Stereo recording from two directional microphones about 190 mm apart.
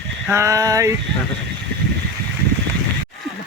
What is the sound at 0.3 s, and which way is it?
Speech, 15° right (ahead or behind).